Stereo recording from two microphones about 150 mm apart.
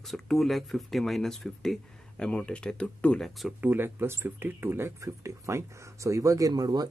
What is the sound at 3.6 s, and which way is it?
Speech, 15° right (ahead or behind).